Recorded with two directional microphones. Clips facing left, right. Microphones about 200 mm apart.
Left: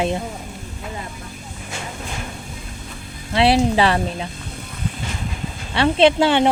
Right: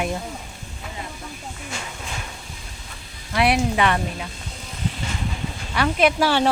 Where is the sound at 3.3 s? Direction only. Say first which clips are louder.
Left 4 dB; 25° left (ahead or behind).